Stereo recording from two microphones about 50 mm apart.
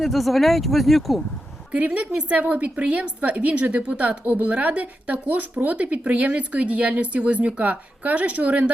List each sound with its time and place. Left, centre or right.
0.0 s speech: centre
1.7 s speech: right